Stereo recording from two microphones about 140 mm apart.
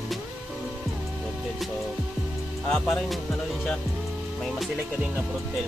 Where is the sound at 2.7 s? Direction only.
5° left (ahead or behind).